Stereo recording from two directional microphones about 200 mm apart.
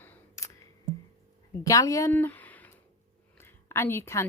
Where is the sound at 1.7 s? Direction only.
15° left (ahead or behind).